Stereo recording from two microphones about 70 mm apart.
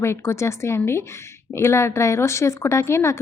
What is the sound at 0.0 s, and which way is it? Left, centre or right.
Speech, left.